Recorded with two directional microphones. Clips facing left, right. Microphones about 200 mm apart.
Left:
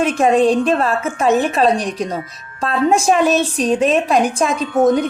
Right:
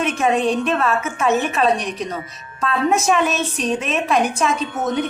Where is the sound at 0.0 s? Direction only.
30° left (ahead or behind).